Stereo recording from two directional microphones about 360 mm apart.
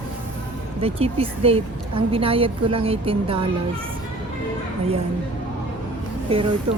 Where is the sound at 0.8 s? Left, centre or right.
Centre.